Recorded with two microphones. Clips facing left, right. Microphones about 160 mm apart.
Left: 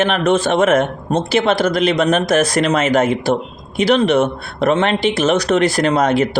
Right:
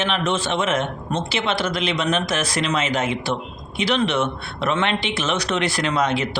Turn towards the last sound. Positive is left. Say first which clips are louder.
# left 7 dB
turn(degrees=45)  # may be behind; listen again after turning